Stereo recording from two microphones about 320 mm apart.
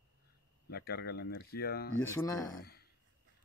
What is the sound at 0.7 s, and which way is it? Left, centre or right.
Speech, left.